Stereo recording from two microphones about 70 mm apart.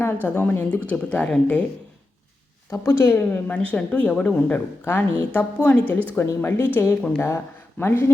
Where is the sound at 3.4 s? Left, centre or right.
Centre.